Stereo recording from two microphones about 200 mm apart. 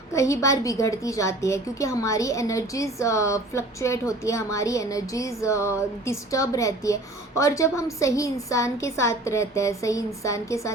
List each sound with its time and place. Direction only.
0.1 s a woman's voice: 15° left (ahead or behind)